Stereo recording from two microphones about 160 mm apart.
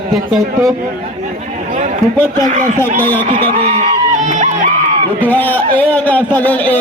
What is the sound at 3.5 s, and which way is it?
Speech, 40° right (ahead or behind).